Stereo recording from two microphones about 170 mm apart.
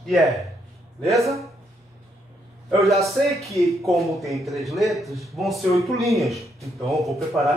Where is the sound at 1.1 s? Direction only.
20° right (ahead or behind).